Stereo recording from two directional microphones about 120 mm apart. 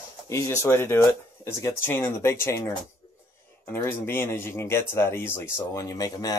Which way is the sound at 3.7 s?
20° left (ahead or behind).